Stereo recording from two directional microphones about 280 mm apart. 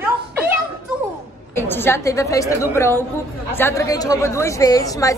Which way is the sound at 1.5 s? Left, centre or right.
Centre.